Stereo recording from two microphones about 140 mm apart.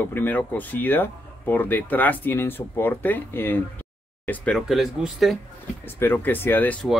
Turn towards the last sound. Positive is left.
turn(degrees=15)  # may be behind; listen again after turning